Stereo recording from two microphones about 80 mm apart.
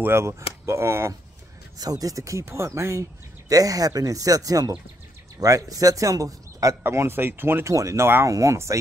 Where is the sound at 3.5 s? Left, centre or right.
Right.